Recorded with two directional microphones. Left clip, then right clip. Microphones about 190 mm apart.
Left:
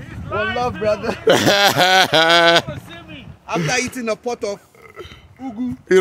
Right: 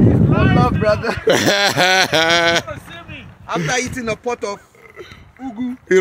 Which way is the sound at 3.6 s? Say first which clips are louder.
Even; 55° left (ahead or behind).